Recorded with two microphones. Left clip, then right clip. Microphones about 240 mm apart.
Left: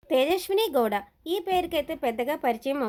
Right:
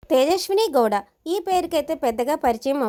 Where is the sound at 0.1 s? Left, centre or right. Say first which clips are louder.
Right 5 dB; right.